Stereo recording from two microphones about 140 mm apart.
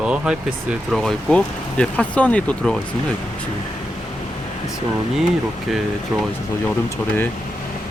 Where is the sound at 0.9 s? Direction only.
5° left (ahead or behind).